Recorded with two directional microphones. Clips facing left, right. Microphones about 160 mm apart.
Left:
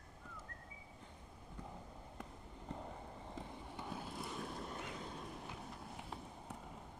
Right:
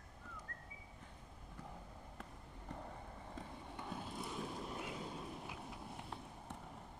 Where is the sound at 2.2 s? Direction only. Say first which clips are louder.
Left 3 dB; 20° left (ahead or behind).